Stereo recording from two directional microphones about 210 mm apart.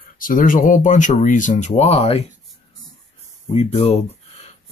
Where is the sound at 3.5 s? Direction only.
30° left (ahead or behind).